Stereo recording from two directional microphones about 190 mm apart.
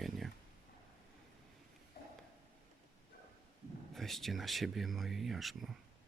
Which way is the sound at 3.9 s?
Centre (ahead or behind).